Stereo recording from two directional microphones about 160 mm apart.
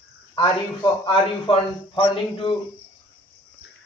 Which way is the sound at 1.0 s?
30° left (ahead or behind).